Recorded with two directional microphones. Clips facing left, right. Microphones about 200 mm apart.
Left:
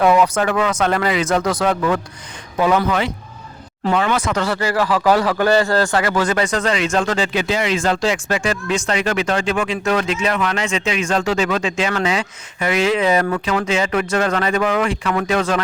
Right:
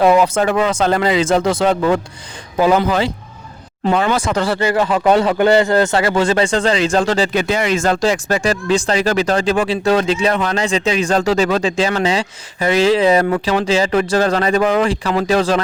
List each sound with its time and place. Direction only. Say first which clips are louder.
0.0 s a man's voice: right 2 dB; 30° right (ahead or behind)
7.3 s speech: right 3 dB; 50° right (ahead or behind); by 15.6 s 30° right (ahead or behind)